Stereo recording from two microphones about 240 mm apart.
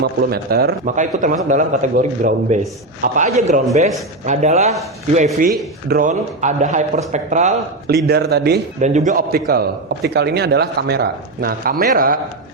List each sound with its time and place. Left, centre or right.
0.0 s speech: right
7.9 s a man's voice: right
8.8 s speech: right